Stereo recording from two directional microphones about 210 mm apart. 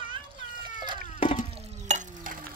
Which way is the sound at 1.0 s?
35° left (ahead or behind).